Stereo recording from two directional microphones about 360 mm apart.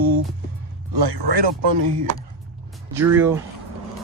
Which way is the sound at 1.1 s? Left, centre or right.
Right.